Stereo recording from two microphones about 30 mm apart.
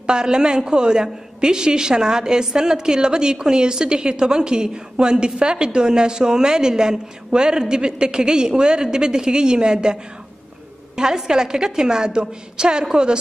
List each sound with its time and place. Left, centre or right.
0.0 s a woman's voice: right
11.0 s a woman's voice: right